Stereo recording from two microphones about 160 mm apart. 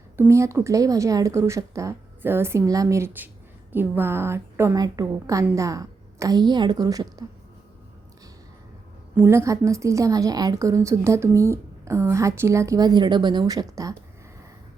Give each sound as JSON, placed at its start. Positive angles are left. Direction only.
{"t": 0.2, "sound": "a woman's voice", "side_deg": -20}
{"t": 9.1, "sound": "a woman's voice", "side_deg": -15}